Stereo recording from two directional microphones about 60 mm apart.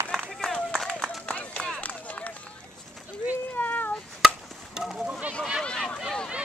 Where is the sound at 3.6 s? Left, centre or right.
Left.